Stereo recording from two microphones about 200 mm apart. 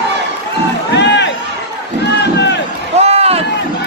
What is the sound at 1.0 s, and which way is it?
Run, 60° left (ahead or behind).